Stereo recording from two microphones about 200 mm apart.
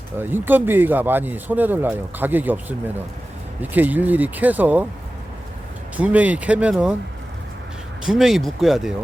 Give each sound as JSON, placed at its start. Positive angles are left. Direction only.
{"t": 0.2, "sound": "speech", "side_deg": -10}
{"t": 6.0, "sound": "speech", "side_deg": -5}
{"t": 8.0, "sound": "speech", "side_deg": 0}